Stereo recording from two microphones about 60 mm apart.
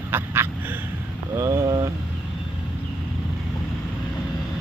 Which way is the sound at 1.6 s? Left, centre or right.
Right.